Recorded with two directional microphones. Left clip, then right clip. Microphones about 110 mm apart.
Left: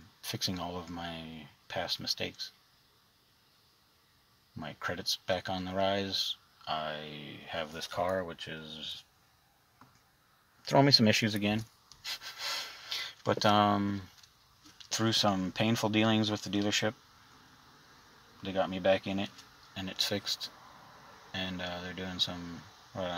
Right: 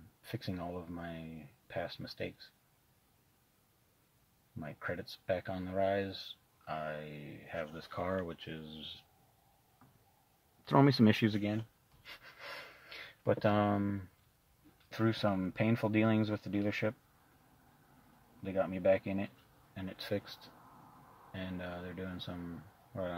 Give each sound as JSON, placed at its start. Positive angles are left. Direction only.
{"t": 0.2, "sound": "speech", "side_deg": 0}
{"t": 4.6, "sound": "speech", "side_deg": 0}
{"t": 10.6, "sound": "speech", "side_deg": -20}
{"t": 18.4, "sound": "speech", "side_deg": -5}